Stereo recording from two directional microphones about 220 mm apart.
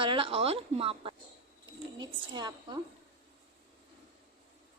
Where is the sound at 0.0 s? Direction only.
25° right (ahead or behind).